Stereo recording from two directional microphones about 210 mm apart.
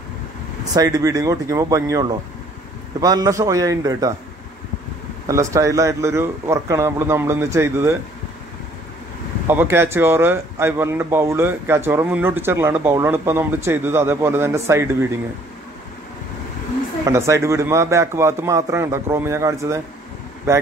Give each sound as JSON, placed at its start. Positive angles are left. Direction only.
{"t": 0.7, "sound": "speech", "side_deg": -15}
{"t": 5.2, "sound": "speech", "side_deg": -15}
{"t": 9.5, "sound": "speech", "side_deg": -10}
{"t": 17.0, "sound": "speech", "side_deg": -15}